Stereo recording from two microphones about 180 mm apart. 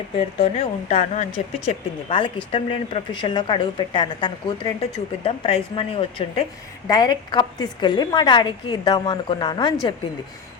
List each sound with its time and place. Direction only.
0.3 s a woman's voice: 35° left (ahead or behind)
2.0 s a woman's voice: 25° left (ahead or behind)